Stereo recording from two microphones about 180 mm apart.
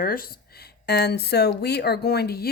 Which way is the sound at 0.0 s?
55° left (ahead or behind).